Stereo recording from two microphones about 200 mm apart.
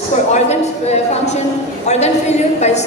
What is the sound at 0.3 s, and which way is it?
A woman's voice, 35° left (ahead or behind).